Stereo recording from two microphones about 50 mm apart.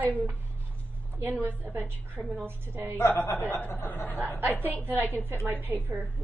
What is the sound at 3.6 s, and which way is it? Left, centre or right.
Speech, left.